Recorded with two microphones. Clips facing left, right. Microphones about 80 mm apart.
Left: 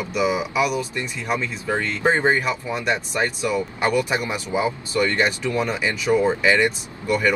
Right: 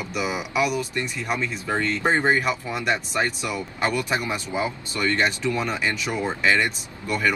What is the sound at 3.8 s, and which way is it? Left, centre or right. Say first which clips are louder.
Speech: left 1 dB; centre.